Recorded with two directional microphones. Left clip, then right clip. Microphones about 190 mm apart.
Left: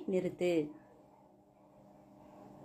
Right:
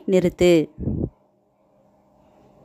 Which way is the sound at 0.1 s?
60° right (ahead or behind).